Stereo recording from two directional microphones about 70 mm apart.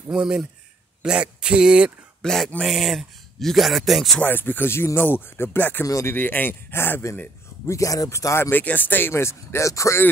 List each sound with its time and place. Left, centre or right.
0.1 s speech: centre
2.2 s speech: centre
4.2 s speech: left
7.6 s speech: left
8.5 s speech: left